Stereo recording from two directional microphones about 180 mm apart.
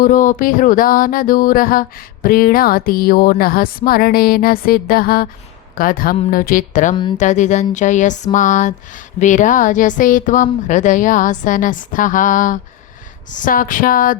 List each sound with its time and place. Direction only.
0.0 s speech: 45° left (ahead or behind)
2.2 s a sound: 55° left (ahead or behind)
5.7 s speech: 50° left (ahead or behind)